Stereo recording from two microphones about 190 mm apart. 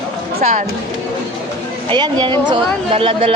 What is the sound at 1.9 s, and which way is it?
Speech, 25° right (ahead or behind).